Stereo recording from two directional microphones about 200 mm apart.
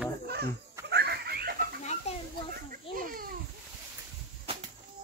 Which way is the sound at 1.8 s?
35° left (ahead or behind).